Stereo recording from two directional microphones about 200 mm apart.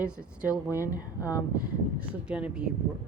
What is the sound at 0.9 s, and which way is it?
Speech, 15° left (ahead or behind).